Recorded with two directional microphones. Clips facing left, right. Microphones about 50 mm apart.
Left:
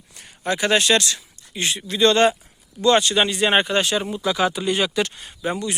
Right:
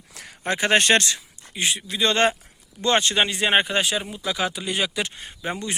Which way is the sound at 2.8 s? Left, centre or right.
Right.